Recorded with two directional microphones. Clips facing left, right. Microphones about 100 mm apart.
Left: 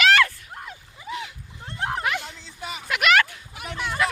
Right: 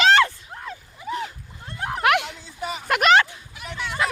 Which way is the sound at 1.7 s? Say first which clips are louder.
Left 1 dB; 25° left (ahead or behind).